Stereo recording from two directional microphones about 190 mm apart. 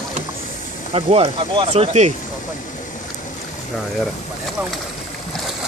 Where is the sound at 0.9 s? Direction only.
30° right (ahead or behind).